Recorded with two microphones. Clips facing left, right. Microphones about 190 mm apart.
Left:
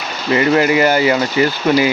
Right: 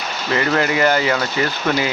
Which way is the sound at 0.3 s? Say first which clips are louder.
Left 5 dB; 10° left (ahead or behind).